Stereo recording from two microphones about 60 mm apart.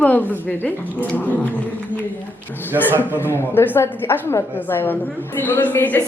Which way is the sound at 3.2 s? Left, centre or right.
Left.